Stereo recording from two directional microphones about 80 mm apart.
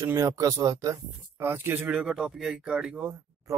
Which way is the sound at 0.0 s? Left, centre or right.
Right.